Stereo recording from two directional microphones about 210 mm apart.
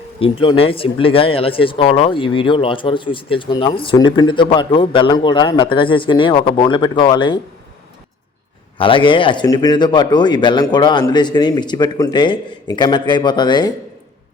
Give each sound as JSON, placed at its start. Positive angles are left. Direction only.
{"t": 0.2, "sound": "speech", "side_deg": 25}
{"t": 8.8, "sound": "speech", "side_deg": 25}